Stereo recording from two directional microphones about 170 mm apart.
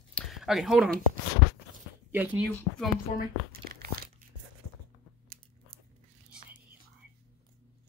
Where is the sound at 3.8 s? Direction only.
60° right (ahead or behind).